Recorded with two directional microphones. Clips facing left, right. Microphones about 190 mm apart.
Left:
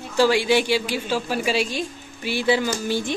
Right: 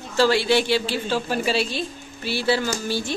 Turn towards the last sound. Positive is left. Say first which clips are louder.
# left 2 dB
turn(degrees=15)  # may be behind; listen again after turning